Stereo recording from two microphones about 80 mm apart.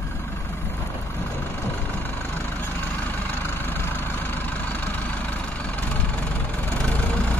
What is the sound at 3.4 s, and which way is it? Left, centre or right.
Vehicle, left.